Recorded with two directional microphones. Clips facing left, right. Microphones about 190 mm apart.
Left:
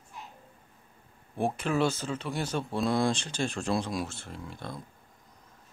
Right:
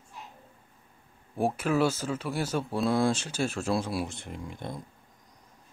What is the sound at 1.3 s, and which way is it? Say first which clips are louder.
Speech: right 2 dB; 5° right (ahead or behind).